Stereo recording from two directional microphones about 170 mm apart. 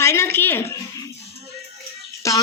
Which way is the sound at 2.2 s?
20° left (ahead or behind).